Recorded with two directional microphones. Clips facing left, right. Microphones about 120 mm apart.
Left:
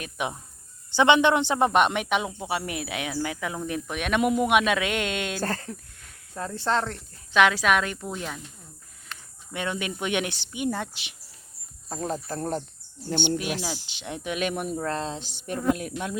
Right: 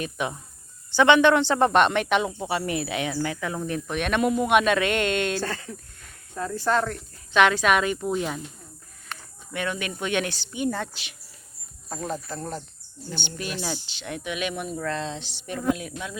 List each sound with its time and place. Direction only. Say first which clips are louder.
0.2 s a man's voice: right 1 dB; 15° left (ahead or behind)
5.4 s speech: left 1 dB; 40° left (ahead or behind)
6.3 s speech: right 2 dB; 25° left (ahead or behind)
7.3 s a man's voice: right 1 dB; centre (ahead or behind)
9.5 s speech: right 1 dB; 20° left (ahead or behind)
11.9 s speech: left 1 dB; 35° left (ahead or behind)
13.2 s speech: left 2 dB; 15° left (ahead or behind)
14.3 s speech: left 2 dB; 45° left (ahead or behind)